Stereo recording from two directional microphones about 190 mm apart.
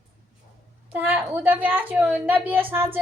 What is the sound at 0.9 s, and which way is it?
A woman's voice, 10° right (ahead or behind).